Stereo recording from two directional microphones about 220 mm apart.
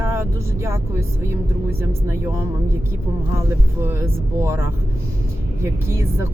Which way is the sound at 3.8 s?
10° right (ahead or behind).